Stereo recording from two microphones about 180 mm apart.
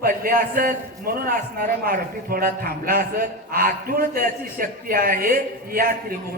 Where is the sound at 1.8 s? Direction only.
55° right (ahead or behind).